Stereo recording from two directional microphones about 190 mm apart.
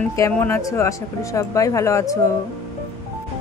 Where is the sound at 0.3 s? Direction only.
15° left (ahead or behind).